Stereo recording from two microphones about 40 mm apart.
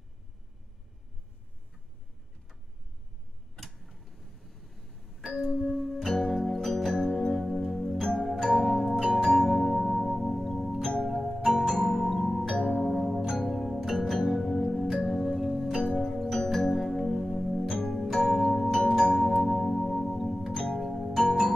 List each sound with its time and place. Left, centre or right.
3.5 s tick-tock: centre
5.6 s music: centre
8.0 s music: centre
8.3 s music: centre
10.8 s music: centre
11.1 s music: centre
18.8 s music: centre
19.3 s music: centre
20.5 s music: centre
20.8 s music: centre